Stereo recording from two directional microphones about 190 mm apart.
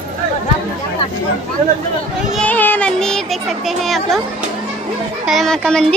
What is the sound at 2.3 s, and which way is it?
Speech, 10° left (ahead or behind).